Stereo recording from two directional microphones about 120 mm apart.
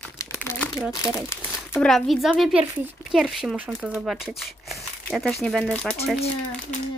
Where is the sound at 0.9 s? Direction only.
25° left (ahead or behind).